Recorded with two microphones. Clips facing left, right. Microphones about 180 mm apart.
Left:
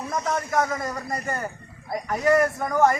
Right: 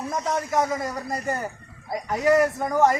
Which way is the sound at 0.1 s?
15° right (ahead or behind).